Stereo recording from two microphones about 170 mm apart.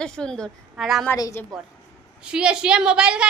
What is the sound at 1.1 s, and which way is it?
Speech, 20° left (ahead or behind).